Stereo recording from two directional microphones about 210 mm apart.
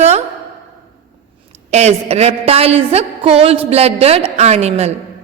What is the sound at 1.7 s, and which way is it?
A woman's voice, 30° right (ahead or behind).